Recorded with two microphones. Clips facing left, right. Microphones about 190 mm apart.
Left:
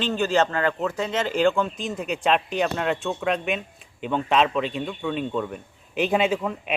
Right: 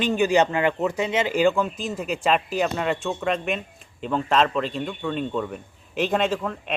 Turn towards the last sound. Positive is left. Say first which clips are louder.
# left 1 dB
turn(degrees=5)  # may be behind; listen again after turning